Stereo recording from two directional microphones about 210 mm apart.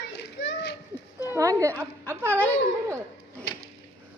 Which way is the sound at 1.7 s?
10° left (ahead or behind).